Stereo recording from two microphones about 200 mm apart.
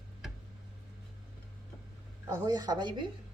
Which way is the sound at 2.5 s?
20° right (ahead or behind).